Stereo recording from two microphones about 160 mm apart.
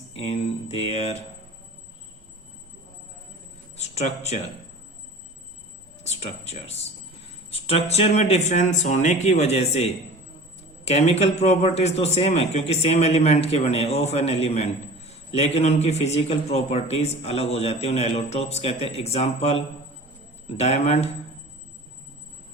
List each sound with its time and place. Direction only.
0.1 s a man's voice: 40° left (ahead or behind)
3.8 s speech: 45° left (ahead or behind)
6.0 s a man's voice: 45° left (ahead or behind)